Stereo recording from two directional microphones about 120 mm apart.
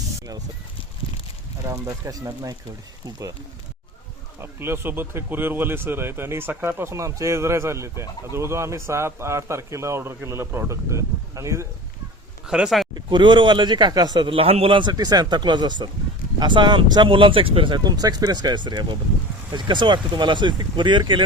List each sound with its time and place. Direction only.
1.6 s a man's voice: 30° right (ahead or behind)
4.4 s a man's voice: 20° right (ahead or behind)
12.5 s speech: 5° right (ahead or behind)
12.9 s a man's voice: 40° right (ahead or behind)